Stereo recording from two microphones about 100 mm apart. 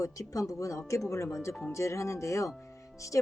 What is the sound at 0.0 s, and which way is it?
Speech, 35° left (ahead or behind).